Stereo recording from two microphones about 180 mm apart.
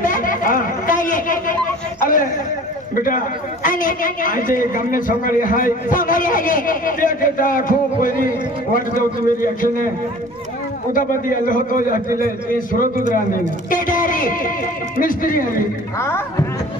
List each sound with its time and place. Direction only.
0.0 s chatter: 50° left (ahead or behind)
3.0 s a man's voice: 50° left (ahead or behind)
10.9 s a man's voice: 50° left (ahead or behind)
16.0 s speech: 15° left (ahead or behind)